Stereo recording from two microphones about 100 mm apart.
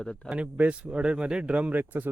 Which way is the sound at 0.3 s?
15° right (ahead or behind).